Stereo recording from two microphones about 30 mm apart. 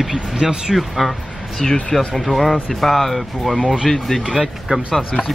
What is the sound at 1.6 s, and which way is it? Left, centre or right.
Speech, left.